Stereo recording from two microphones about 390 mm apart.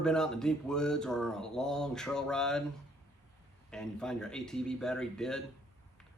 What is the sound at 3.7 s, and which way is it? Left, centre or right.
Speech, centre.